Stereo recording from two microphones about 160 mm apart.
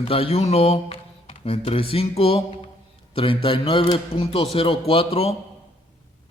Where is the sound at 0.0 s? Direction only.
35° left (ahead or behind).